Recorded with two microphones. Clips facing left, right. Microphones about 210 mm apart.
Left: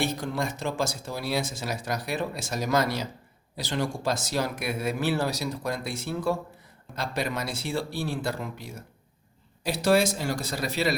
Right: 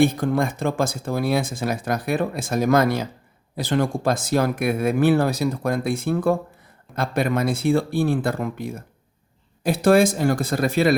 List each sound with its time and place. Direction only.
0.0 s speech: 55° right (ahead or behind)